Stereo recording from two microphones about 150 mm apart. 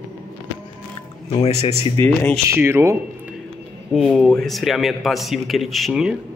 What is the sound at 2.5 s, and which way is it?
Speech, 15° right (ahead or behind).